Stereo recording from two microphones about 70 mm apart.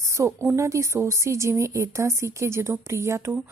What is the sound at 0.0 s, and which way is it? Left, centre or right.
A woman's voice, right.